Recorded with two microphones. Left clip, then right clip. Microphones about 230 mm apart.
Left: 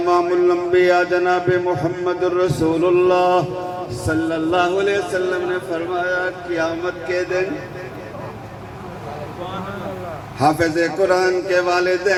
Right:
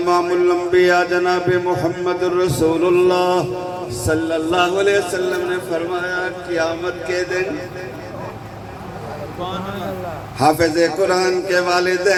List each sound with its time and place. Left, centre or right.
0.0 s music: right
10.4 s music: right